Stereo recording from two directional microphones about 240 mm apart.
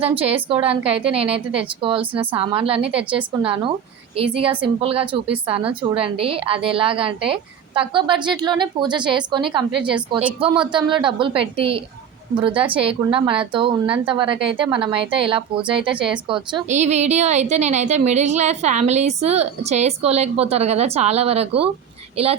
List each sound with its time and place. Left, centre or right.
0.4 s a woman's voice: right